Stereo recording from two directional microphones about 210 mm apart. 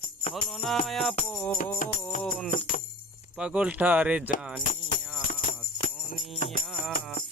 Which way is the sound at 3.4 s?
5° right (ahead or behind).